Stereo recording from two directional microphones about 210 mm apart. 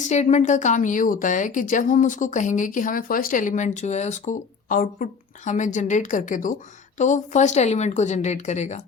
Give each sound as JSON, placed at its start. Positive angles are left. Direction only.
{"t": 0.1, "sound": "a woman's voice", "side_deg": 35}